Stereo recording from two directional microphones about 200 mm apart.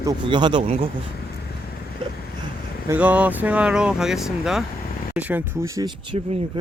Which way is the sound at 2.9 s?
5° right (ahead or behind).